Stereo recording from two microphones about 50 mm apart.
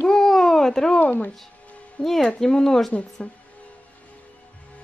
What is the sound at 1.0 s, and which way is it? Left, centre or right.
Speech, left.